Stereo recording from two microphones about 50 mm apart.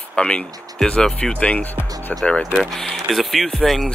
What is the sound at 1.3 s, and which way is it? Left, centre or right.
Speech, left.